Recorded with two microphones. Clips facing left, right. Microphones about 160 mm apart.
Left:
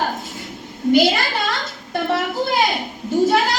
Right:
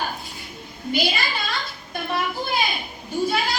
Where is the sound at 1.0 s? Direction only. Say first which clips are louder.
Left 7 dB; 75° left (ahead or behind).